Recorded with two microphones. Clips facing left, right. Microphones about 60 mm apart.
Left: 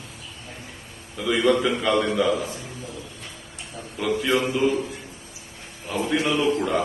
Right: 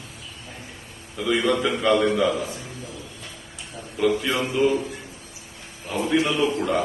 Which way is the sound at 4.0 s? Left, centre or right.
Centre.